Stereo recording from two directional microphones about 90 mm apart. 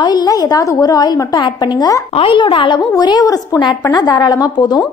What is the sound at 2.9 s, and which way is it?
A woman's voice, 45° left (ahead or behind).